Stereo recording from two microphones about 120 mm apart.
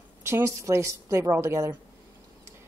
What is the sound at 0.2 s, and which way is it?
Speech, 25° right (ahead or behind).